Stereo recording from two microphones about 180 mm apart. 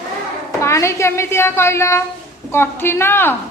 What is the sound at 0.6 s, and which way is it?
A child's voice, 15° left (ahead or behind).